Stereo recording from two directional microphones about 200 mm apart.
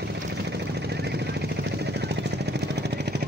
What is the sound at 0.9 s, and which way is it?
Vehicle, 55° right (ahead or behind).